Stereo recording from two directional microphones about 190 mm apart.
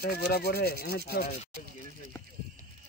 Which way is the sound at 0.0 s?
55° left (ahead or behind).